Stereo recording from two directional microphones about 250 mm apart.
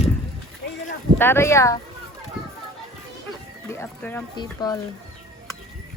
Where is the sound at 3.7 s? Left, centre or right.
Centre.